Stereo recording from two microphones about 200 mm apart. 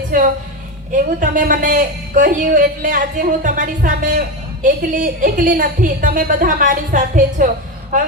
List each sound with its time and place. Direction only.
0.1 s a woman's voice: 40° right (ahead or behind)